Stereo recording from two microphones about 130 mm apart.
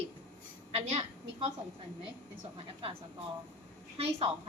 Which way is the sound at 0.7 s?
50° right (ahead or behind).